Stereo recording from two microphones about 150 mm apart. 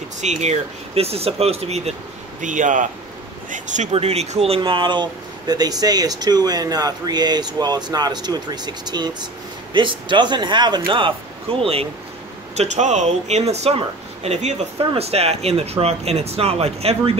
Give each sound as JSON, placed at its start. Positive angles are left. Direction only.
{"t": 0.2, "sound": "speech", "side_deg": -50}
{"t": 2.4, "sound": "speech", "side_deg": -60}
{"t": 4.6, "sound": "speech", "side_deg": -30}
{"t": 12.5, "sound": "speech", "side_deg": -50}